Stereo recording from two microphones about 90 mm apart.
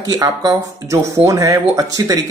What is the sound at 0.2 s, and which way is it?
Speech, 45° right (ahead or behind).